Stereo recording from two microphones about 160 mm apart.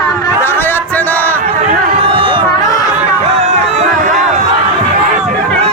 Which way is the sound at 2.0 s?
35° right (ahead or behind).